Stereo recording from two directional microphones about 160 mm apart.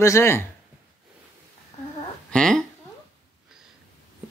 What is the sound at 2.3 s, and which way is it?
Speech, 5° left (ahead or behind).